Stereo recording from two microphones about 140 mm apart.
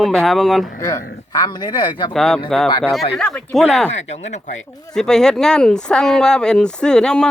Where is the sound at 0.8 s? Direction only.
20° left (ahead or behind).